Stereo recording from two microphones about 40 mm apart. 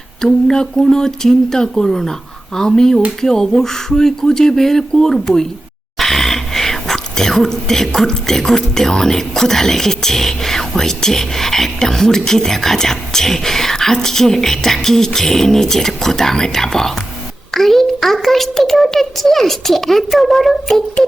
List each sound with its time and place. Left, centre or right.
0.2 s a child's voice: centre